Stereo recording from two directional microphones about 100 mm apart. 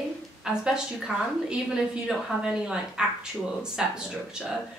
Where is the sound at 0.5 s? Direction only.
5° right (ahead or behind).